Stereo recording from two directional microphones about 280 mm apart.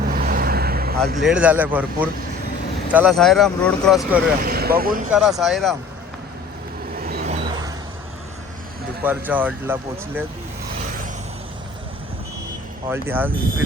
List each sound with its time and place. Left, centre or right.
0.0 s vehicle: right
1.2 s speech: centre
4.4 s speech: right
5.4 s speech: centre
6.9 s vehicle: right
9.0 s speech: centre
12.9 s speech: centre